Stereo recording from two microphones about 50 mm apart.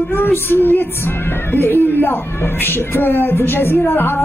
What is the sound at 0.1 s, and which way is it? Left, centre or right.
Speech, left.